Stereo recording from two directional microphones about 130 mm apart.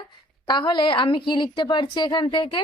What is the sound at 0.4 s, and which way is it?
A woman's voice, 35° left (ahead or behind).